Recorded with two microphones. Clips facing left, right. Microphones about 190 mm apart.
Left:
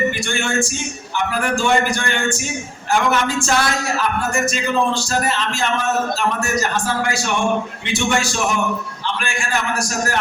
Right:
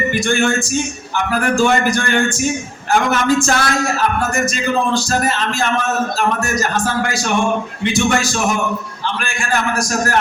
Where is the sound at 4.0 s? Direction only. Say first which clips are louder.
Right 2 dB; 45° right (ahead or behind).